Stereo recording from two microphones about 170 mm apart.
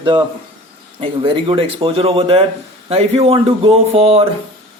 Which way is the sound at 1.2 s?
30° right (ahead or behind).